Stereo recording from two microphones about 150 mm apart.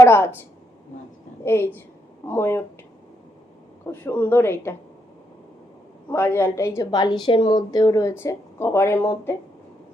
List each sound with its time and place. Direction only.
0.0 s a woman's voice: 15° left (ahead or behind)
1.5 s speech: 15° left (ahead or behind)
3.9 s speech: 15° left (ahead or behind)
6.1 s a woman's voice: 15° left (ahead or behind)